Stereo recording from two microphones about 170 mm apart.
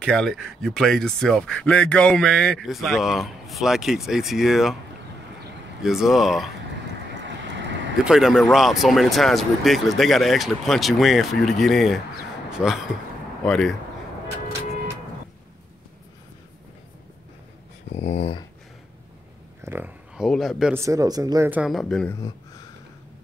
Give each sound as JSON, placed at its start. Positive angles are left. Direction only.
{"t": 0.0, "sound": "speech", "side_deg": 5}
{"t": 5.8, "sound": "speech", "side_deg": 0}
{"t": 7.2, "sound": "vehicle", "side_deg": -90}
{"t": 8.0, "sound": "speech", "side_deg": -5}
{"t": 17.9, "sound": "speech", "side_deg": 40}
{"t": 19.6, "sound": "a sound", "side_deg": -10}
{"t": 20.2, "sound": "speech", "side_deg": 0}
{"t": 20.7, "sound": "speech", "side_deg": -20}